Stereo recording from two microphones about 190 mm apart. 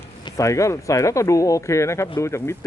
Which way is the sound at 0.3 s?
15° left (ahead or behind).